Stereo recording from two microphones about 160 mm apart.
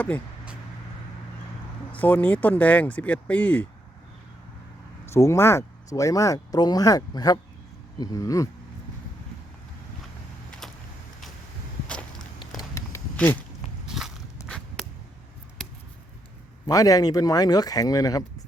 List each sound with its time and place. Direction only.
1.9 s speech: 10° left (ahead or behind)
5.0 s speech: 15° left (ahead or behind)
10.6 s vehicle: centre (ahead or behind)
12.5 s a sound: 20° left (ahead or behind)
13.1 s speech: 10° left (ahead or behind)
13.8 s walk: 5° right (ahead or behind)
14.4 s zipper: 5° left (ahead or behind)
16.6 s speech: 20° left (ahead or behind)